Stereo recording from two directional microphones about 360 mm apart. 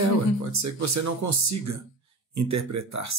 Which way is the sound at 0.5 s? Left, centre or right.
Right.